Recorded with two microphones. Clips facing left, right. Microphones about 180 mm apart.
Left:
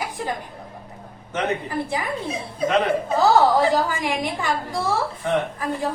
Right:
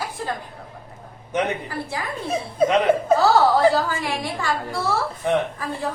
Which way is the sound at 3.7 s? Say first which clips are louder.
Left 1 dB; 15° left (ahead or behind).